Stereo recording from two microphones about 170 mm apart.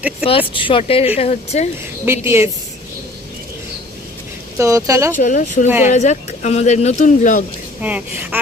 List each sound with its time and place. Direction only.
0.3 s speech: 30° left (ahead or behind)
2.2 s speech: 15° right (ahead or behind)
4.5 s speech: 20° right (ahead or behind)
5.1 s speech: 50° left (ahead or behind)
7.8 s speech: 10° right (ahead or behind)